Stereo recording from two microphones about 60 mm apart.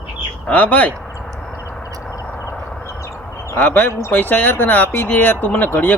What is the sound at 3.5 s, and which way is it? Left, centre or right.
Speech, left.